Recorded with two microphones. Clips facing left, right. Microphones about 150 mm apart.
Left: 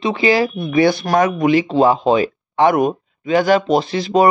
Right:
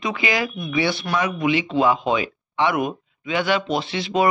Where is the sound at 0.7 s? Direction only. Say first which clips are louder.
Left 8 dB; 45° left (ahead or behind).